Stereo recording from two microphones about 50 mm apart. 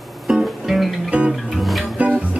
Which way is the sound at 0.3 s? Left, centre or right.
Centre.